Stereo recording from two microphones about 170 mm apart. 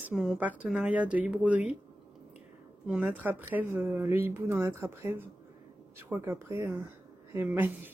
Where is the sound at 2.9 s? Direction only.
10° right (ahead or behind).